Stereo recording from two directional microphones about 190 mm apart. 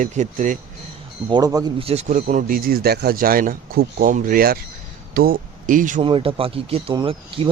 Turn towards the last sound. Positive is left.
turn(degrees=-30)  # may be behind; listen again after turning